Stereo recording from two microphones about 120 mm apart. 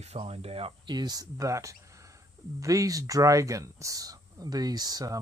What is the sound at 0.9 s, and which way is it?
Speech, 35° right (ahead or behind).